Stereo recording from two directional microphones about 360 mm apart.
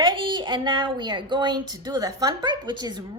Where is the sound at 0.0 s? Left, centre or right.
Centre.